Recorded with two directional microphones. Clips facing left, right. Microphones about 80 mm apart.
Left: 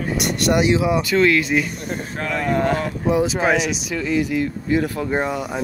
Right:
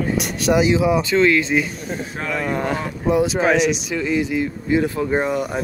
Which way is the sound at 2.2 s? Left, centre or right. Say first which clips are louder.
Left 3 dB; centre.